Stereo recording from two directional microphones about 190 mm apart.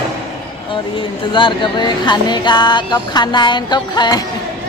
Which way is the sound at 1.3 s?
25° left (ahead or behind).